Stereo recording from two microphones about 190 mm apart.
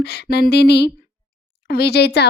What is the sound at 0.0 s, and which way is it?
Speech, 60° left (ahead or behind).